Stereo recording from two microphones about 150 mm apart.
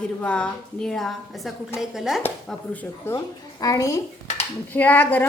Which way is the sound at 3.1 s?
25° left (ahead or behind).